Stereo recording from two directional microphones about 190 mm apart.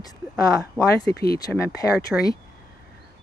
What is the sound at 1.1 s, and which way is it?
Speech, 55° left (ahead or behind).